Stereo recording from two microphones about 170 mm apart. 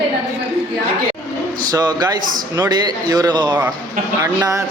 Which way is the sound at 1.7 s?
25° right (ahead or behind).